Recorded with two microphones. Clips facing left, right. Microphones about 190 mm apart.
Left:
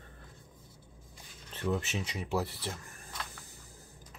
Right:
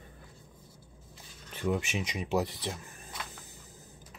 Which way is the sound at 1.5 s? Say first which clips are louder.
Right 2 dB; 10° right (ahead or behind).